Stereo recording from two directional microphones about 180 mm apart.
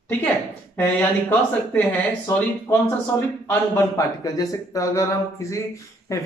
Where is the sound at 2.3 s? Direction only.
15° left (ahead or behind).